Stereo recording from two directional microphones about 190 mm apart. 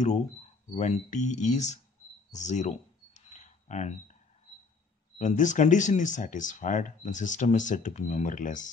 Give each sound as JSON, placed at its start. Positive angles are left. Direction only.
{"t": 0.7, "sound": "speech", "side_deg": 35}
{"t": 2.3, "sound": "a sound", "side_deg": 40}
{"t": 5.2, "sound": "speech", "side_deg": 40}